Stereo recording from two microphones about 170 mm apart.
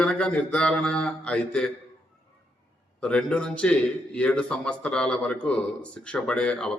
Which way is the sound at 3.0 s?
5° left (ahead or behind).